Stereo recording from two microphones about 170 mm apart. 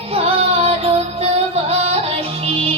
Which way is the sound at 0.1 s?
35° right (ahead or behind).